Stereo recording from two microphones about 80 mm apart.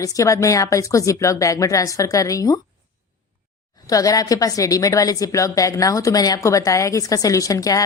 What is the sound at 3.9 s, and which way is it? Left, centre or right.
Speech, left.